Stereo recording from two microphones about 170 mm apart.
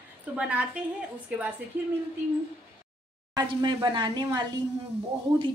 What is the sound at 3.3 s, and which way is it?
A woman's voice, 25° right (ahead or behind).